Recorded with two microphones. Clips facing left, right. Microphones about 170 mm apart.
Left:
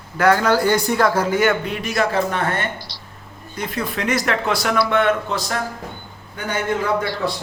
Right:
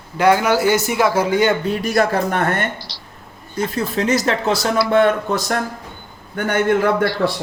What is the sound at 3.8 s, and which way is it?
Speech, 30° right (ahead or behind).